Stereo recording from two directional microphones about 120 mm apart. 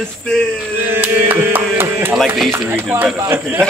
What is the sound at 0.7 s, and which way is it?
Mantra, 15° right (ahead or behind).